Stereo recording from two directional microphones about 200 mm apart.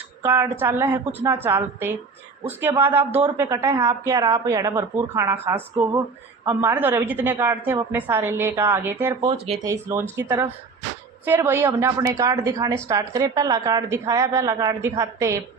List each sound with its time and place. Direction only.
0.2 s a woman's voice: 10° right (ahead or behind)
3.1 s speech: 30° right (ahead or behind)
3.3 s a woman's voice: 15° right (ahead or behind)